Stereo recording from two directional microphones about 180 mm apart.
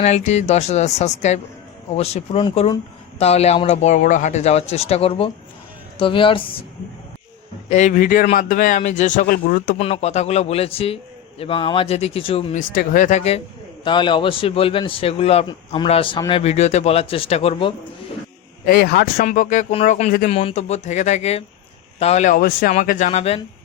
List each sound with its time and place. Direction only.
0.0 s a man's voice: 40° left (ahead or behind)
7.7 s speech: 40° left (ahead or behind)
9.7 s speech: 35° left (ahead or behind)
12.5 s speech: 50° left (ahead or behind)
13.8 s a man's voice: 25° left (ahead or behind)
18.6 s speech: 55° left (ahead or behind)
20.3 s speech: 35° left (ahead or behind)